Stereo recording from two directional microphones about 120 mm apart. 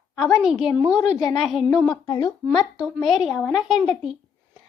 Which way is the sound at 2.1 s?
35° left (ahead or behind).